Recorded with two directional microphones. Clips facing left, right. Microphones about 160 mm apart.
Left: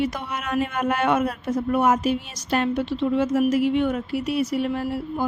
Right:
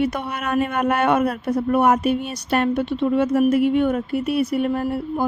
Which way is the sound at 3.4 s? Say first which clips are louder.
Right 3 dB; 55° right (ahead or behind).